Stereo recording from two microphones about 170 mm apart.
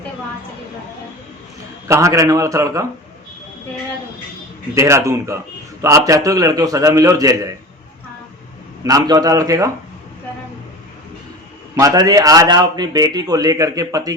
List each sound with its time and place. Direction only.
1.9 s a man's voice: 20° right (ahead or behind)
4.7 s a man's voice: 15° right (ahead or behind)
8.8 s a man's voice: 20° right (ahead or behind)
11.8 s a man's voice: 20° right (ahead or behind)